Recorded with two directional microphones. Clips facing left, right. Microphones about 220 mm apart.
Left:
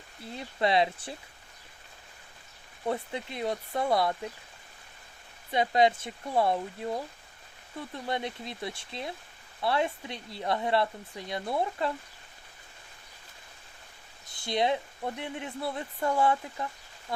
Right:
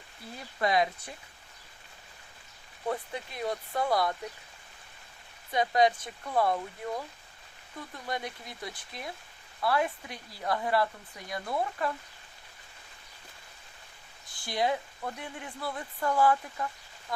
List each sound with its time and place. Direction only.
0.3 s speech: 25° left (ahead or behind)
2.8 s speech: 25° left (ahead or behind)
5.5 s speech: 25° left (ahead or behind)
14.3 s speech: 20° left (ahead or behind)